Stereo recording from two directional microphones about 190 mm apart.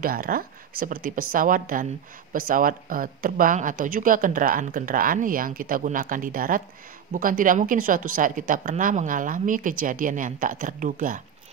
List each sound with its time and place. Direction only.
0.0 s speech: 50° right (ahead or behind)